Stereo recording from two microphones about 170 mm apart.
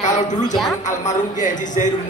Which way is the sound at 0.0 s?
45° left (ahead or behind).